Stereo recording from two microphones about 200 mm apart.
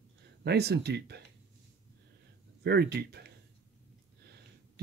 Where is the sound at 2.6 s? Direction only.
55° right (ahead or behind).